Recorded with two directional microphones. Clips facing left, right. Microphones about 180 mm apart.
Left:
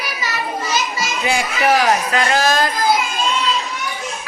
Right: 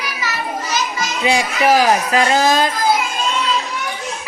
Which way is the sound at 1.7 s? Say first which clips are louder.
Right 2 dB; 30° right (ahead or behind).